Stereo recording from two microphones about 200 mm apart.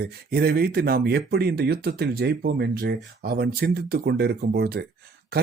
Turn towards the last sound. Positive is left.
turn(degrees=-50)  # may be behind; listen again after turning